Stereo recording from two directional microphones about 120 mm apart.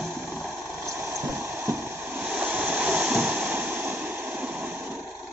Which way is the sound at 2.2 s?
10° right (ahead or behind).